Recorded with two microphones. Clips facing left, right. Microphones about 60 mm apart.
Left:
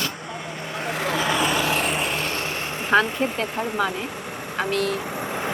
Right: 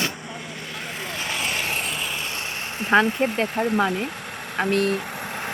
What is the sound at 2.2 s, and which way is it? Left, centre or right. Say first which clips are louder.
Vehicle: left 4 dB; left.